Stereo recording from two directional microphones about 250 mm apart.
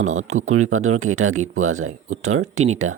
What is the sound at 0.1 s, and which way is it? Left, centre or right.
Speech, right.